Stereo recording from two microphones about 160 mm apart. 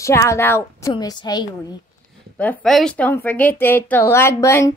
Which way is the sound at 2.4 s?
10° left (ahead or behind).